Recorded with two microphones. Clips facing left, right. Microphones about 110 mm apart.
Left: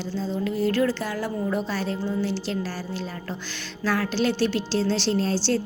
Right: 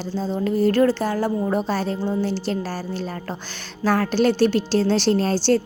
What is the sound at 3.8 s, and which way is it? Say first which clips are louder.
A woman's voice: right 5 dB; 45° right (ahead or behind).